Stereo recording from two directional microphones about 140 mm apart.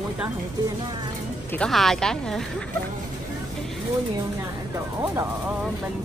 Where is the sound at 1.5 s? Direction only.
5° left (ahead or behind).